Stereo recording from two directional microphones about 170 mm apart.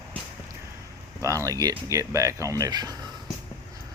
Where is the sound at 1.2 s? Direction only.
20° right (ahead or behind).